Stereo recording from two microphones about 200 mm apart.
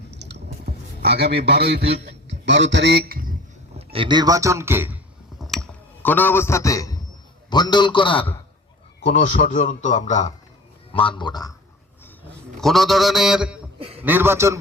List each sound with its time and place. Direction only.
0.1 s clicking: 55° right (ahead or behind)
3.8 s a man's voice: 25° right (ahead or behind); by 4.9 s 10° right (ahead or behind)
5.4 s a sound: centre (ahead or behind); by 7.0 s 15° left (ahead or behind)
7.5 s a man's voice: 20° left (ahead or behind)
9.0 s a man's voice: 40° left (ahead or behind)
10.9 s a man's voice: 25° left (ahead or behind)
12.5 s a sound: centre (ahead or behind)
13.7 s a sound: 30° right (ahead or behind)
14.0 s a man's voice: 10° right (ahead or behind)